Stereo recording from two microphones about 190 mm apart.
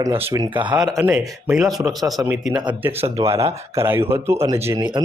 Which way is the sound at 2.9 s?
30° right (ahead or behind).